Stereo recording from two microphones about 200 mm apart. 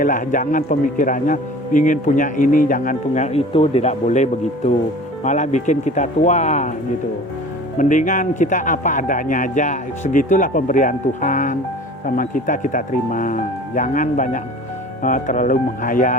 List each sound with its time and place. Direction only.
0.0 s a man's voice: 40° left (ahead or behind)
7.8 s a man's voice: 40° left (ahead or behind)